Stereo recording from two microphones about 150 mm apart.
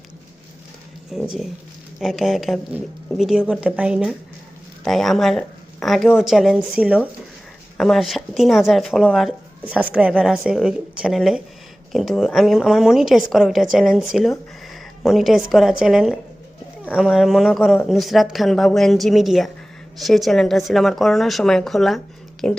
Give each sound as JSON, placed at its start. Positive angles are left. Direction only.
{"t": 1.1, "sound": "speech", "side_deg": 0}